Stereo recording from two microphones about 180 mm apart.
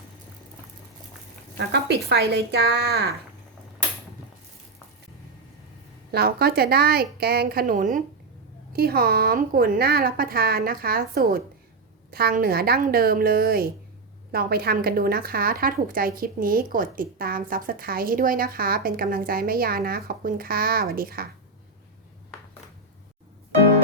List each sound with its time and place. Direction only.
1.5 s a woman's voice: 70° right (ahead or behind)
6.1 s a woman's voice: 60° right (ahead or behind)